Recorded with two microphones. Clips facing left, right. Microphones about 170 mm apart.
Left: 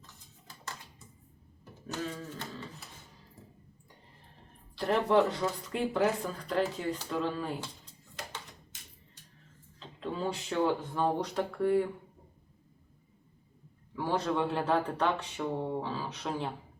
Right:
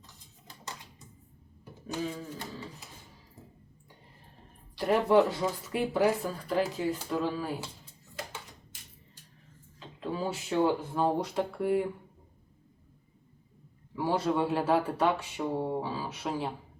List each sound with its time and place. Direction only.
0.4 s typewriter: 15° right (ahead or behind)
1.9 s a sound: 10° right (ahead or behind)
4.7 s speech: 10° right (ahead or behind)
9.8 s speech: 5° right (ahead or behind)
13.9 s speech: 10° right (ahead or behind)